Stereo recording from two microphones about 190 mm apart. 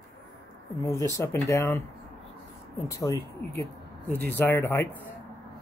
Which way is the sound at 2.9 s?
15° left (ahead or behind).